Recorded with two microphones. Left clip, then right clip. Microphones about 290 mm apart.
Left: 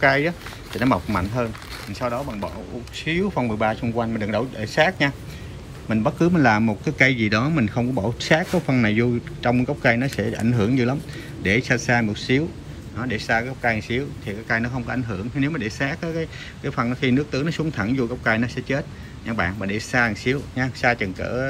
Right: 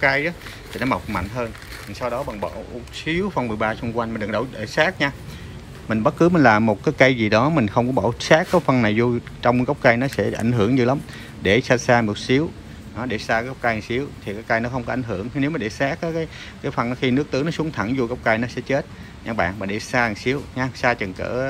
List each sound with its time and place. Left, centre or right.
0.0 s speech: centre
7.8 s speech: right
8.2 s speech: centre